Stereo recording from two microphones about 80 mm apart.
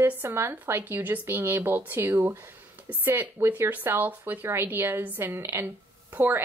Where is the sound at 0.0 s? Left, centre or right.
Right.